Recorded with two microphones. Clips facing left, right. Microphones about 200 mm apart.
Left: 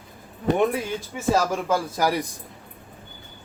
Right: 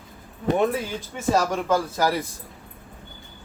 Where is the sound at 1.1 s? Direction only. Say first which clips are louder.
Even; 10° left (ahead or behind).